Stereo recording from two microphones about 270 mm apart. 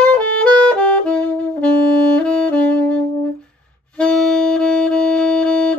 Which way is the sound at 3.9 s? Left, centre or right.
Centre.